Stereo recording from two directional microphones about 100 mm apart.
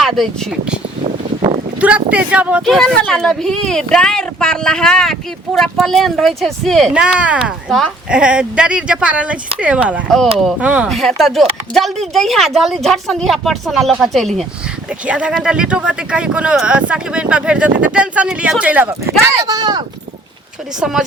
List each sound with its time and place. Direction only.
0.0 s speech: centre (ahead or behind)
1.8 s speech: 15° right (ahead or behind)
2.6 s speech: 5° left (ahead or behind)
6.9 s speech: 10° right (ahead or behind)
10.8 s speech: centre (ahead or behind)
15.0 s speech: 10° right (ahead or behind)
19.3 s speech: 35° right (ahead or behind)
20.7 s speech: 5° right (ahead or behind)